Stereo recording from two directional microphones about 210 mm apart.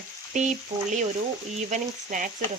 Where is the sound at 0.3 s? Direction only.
35° right (ahead or behind).